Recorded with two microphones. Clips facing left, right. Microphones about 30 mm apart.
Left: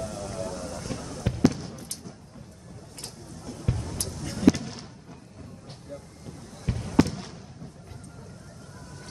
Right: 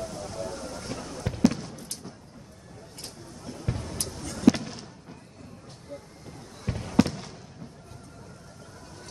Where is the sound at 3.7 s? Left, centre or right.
Centre.